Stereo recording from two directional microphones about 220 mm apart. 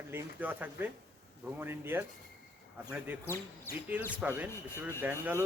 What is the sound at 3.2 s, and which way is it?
Speech, 10° left (ahead or behind).